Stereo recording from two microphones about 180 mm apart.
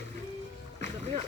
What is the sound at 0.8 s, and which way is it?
Boat, 35° right (ahead or behind).